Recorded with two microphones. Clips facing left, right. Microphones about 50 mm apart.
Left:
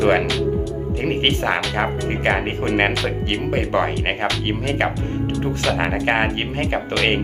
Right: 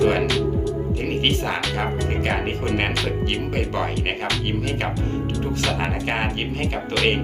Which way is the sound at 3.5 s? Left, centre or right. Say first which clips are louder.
Left 8 dB; left.